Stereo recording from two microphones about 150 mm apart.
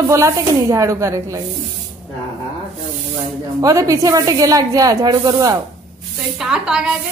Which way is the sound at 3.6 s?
20° right (ahead or behind).